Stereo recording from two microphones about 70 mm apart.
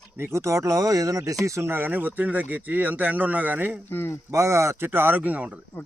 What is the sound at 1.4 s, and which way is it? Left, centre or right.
Speech, right.